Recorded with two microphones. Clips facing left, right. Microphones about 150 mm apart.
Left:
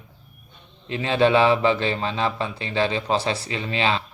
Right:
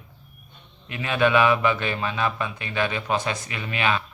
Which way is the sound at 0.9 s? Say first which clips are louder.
Left 3 dB; 30° left (ahead or behind).